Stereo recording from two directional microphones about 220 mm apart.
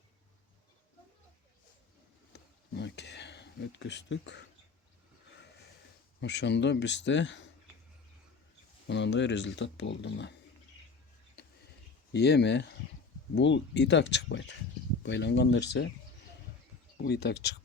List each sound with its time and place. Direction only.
2.3 s a sound: 50° left (ahead or behind)
6.1 s speech: 55° left (ahead or behind)
8.9 s speech: 55° left (ahead or behind)
12.1 s speech: 50° left (ahead or behind)
17.0 s speech: 45° left (ahead or behind)